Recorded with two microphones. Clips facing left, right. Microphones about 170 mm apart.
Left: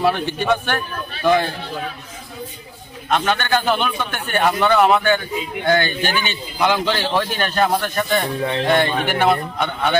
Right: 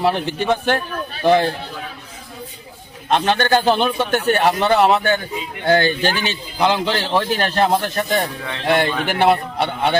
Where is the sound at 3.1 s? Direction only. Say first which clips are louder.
Right 3 dB; 35° right (ahead or behind).